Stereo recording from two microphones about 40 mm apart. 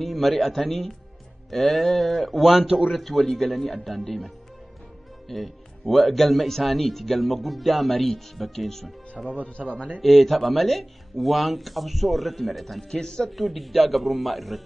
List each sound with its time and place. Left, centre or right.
0.0 s speech: centre
2.6 s speech: right
2.9 s speech: centre
5.3 s speech: centre
9.2 s speech: right
9.6 s speech: centre
10.0 s speech: centre
12.9 s speech: centre
13.4 s speech: centre